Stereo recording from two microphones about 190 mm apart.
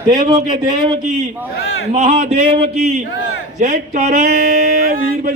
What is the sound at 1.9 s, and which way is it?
Speech, 45° right (ahead or behind).